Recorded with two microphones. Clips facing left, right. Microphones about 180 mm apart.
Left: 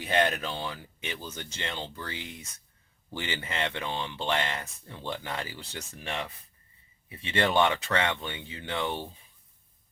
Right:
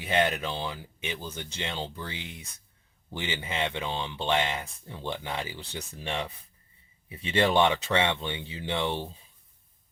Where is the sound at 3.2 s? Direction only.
15° right (ahead or behind).